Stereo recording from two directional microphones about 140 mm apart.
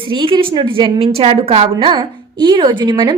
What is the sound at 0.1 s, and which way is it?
A woman's voice, 35° right (ahead or behind).